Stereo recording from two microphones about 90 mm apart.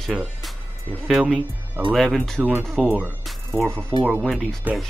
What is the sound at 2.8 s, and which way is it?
Speech, 20° right (ahead or behind).